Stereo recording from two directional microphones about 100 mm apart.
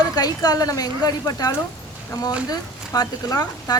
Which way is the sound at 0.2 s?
40° left (ahead or behind).